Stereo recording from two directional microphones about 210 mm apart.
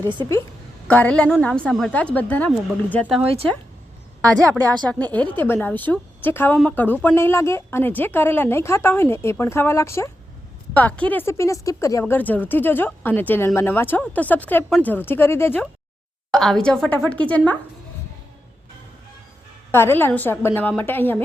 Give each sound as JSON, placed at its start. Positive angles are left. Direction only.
{"t": 0.0, "sound": "a woman's voice", "side_deg": -20}
{"t": 0.9, "sound": "a woman's voice", "side_deg": 5}
{"t": 4.8, "sound": "a woman's voice", "side_deg": 5}
{"t": 19.7, "sound": "a woman's voice", "side_deg": 10}